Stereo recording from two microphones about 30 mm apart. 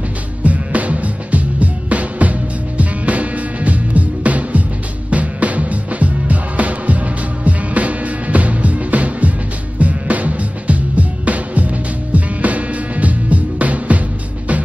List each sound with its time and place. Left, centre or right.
0.4 s music: right